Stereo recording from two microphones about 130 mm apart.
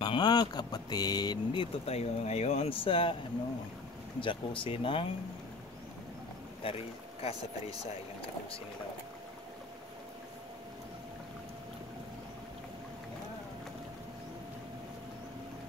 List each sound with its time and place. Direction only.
0.0 s speech: 35° left (ahead or behind)
1.9 s speech: 55° left (ahead or behind)
4.2 s speech: 40° left (ahead or behind)
6.6 s a man's voice: 50° left (ahead or behind)